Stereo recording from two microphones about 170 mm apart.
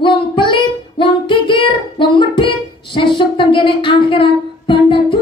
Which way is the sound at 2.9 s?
30° left (ahead or behind).